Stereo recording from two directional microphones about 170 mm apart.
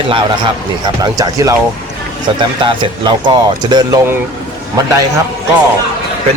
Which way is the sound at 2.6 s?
30° right (ahead or behind).